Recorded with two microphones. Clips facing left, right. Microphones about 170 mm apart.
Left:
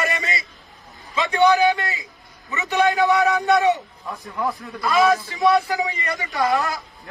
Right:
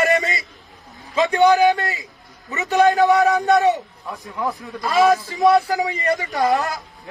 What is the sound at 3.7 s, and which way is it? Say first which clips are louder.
Speech: even; centre (ahead or behind).